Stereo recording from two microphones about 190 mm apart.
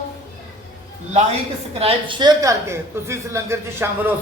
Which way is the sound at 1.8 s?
30° right (ahead or behind).